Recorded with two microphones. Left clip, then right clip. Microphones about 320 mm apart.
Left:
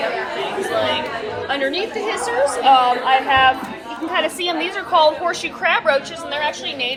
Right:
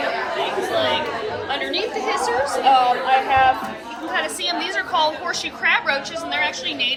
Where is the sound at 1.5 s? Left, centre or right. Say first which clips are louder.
Left 4 dB; left.